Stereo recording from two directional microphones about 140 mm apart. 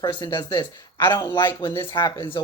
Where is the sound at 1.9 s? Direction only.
30° left (ahead or behind).